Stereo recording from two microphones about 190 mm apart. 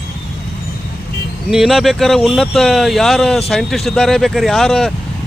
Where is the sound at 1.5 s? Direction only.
Centre (ahead or behind).